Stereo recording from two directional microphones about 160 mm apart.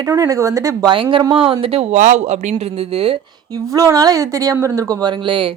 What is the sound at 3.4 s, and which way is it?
Speech, 20° right (ahead or behind).